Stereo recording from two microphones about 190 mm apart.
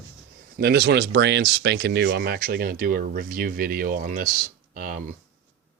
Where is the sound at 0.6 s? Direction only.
60° right (ahead or behind).